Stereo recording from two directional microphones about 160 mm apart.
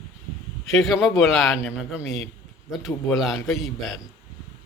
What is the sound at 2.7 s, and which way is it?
A man's voice, centre (ahead or behind).